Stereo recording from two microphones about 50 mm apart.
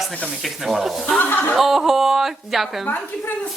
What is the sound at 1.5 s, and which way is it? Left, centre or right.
Speech, centre.